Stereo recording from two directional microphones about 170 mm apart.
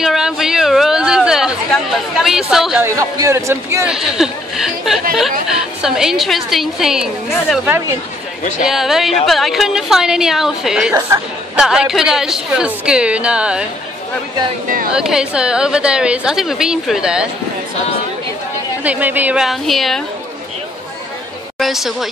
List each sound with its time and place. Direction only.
0.0 s chatter: 5° right (ahead or behind)
2.8 s a man's voice: 15° right (ahead or behind)
3.8 s a woman's voice: 5° right (ahead or behind)
15.0 s a woman's voice: 5° right (ahead or behind)
18.9 s a woman's voice: 10° right (ahead or behind)
21.5 s a woman's voice: centre (ahead or behind)